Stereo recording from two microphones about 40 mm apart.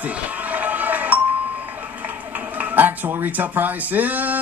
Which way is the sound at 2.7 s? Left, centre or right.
Right.